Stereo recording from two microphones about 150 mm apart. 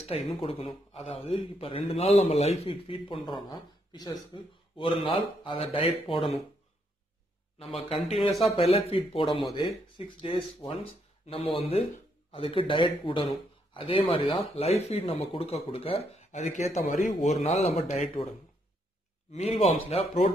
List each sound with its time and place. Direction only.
0.0 s a man's voice: 45° left (ahead or behind)
8.2 s speech: centre (ahead or behind)
8.5 s a man's voice: 40° left (ahead or behind)
19.3 s speech: 45° left (ahead or behind)